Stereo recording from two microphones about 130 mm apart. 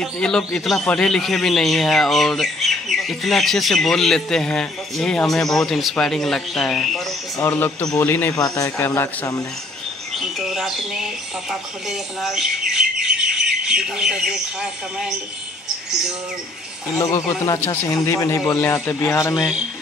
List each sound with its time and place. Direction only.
0.0 s speech: 5° left (ahead or behind)
7.3 s a man's voice: 15° left (ahead or behind)
8.4 s a man's voice: 30° left (ahead or behind)
10.1 s bird: centre (ahead or behind)
11.9 s speech: centre (ahead or behind)
17.0 s a man's voice: 25° left (ahead or behind)
19.3 s speech: 5° right (ahead or behind)